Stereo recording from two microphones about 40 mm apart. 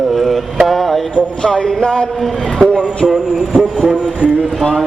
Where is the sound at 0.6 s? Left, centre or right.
Centre.